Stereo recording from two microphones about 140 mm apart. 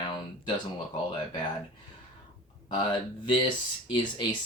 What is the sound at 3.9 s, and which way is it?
Speech, 35° left (ahead or behind).